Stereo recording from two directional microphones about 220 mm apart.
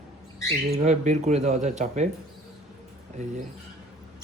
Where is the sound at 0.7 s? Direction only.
30° right (ahead or behind).